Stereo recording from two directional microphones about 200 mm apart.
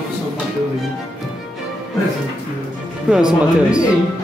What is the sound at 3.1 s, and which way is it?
Speech, 5° right (ahead or behind).